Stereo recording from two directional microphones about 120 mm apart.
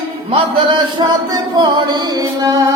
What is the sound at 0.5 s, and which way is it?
Music, 40° right (ahead or behind).